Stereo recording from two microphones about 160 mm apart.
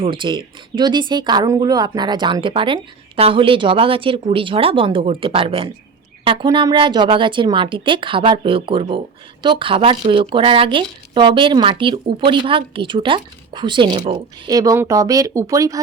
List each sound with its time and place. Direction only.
0.0 s speech: 30° right (ahead or behind)